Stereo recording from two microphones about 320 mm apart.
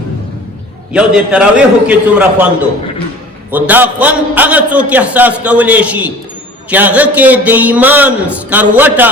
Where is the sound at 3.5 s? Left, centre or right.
Centre.